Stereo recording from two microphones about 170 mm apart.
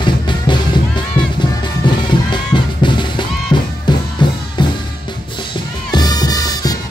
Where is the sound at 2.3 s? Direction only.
25° left (ahead or behind).